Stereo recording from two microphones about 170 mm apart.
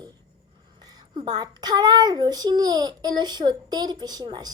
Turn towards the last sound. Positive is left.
turn(degrees=-25)  # may be behind; listen again after turning